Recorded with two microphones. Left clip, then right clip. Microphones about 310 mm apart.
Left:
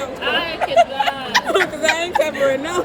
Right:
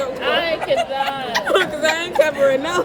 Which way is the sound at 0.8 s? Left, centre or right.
Left.